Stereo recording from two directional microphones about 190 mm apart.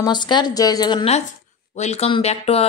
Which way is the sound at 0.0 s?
25° left (ahead or behind).